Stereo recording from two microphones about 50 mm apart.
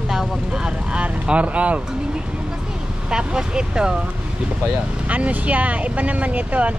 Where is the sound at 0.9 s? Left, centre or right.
Right.